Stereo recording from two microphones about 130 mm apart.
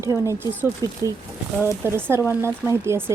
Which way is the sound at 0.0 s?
20° right (ahead or behind).